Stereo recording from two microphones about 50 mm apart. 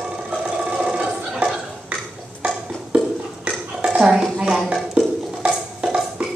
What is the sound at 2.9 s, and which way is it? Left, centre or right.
Dishes, right.